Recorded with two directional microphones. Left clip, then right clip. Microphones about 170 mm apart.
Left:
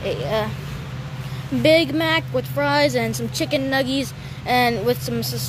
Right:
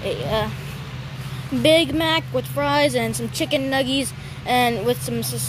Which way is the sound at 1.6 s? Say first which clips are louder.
Even; 5° right (ahead or behind).